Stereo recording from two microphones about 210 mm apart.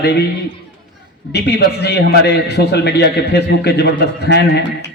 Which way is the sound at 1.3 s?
50° left (ahead or behind).